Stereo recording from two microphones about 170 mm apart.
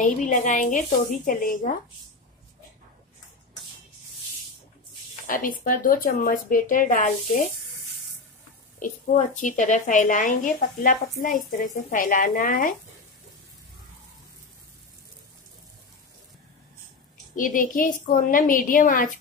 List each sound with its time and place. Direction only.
0.0 s a woman's voice: 50° left (ahead or behind)
5.2 s a woman's voice: 50° left (ahead or behind)
8.7 s a woman's voice: 45° left (ahead or behind)
17.4 s a woman's voice: 55° left (ahead or behind)